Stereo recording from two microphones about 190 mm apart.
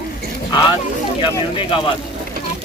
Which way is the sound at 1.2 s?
25° left (ahead or behind).